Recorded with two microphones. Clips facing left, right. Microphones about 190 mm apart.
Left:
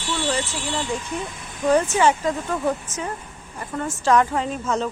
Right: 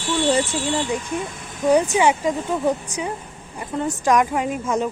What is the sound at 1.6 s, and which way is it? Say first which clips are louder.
Speech: right 1 dB; 15° right (ahead or behind).